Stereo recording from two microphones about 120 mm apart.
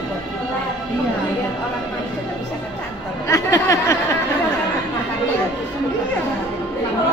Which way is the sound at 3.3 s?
25° left (ahead or behind).